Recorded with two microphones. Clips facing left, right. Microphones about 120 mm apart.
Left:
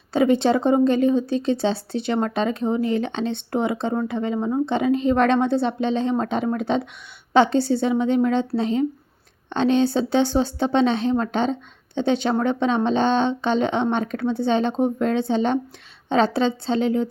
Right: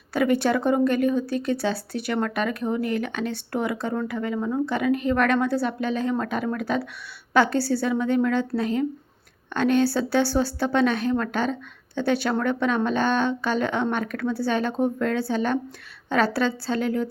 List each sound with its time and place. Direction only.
0.1 s speech: 25° left (ahead or behind)